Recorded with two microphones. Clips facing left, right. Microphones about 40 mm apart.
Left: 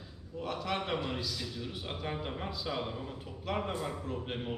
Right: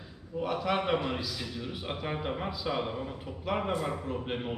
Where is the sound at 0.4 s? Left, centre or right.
Centre.